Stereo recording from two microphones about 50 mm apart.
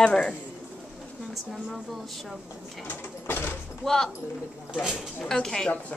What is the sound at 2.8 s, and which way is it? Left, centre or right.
Sewing machine, left.